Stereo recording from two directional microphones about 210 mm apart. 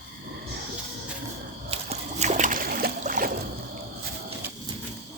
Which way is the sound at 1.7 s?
30° right (ahead or behind).